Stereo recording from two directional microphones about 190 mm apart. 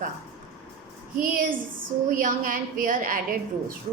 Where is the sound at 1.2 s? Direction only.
45° right (ahead or behind).